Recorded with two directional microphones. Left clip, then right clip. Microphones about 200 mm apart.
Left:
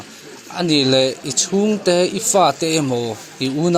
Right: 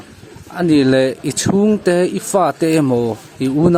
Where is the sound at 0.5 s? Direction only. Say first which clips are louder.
Right 2 dB; 30° right (ahead or behind).